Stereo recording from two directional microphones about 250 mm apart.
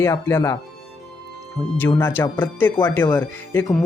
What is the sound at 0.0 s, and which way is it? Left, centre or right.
Speech, centre.